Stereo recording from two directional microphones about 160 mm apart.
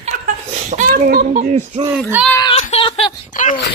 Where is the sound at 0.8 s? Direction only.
65° right (ahead or behind).